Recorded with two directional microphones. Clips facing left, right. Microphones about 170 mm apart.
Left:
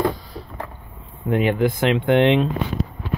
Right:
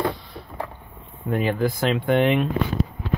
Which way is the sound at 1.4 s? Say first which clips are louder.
Left 3 dB; 20° left (ahead or behind).